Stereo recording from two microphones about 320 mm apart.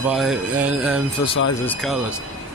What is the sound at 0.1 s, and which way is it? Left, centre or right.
Speech, centre.